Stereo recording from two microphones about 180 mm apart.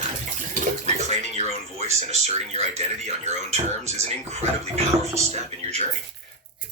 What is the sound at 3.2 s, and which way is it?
Speech, 40° right (ahead or behind).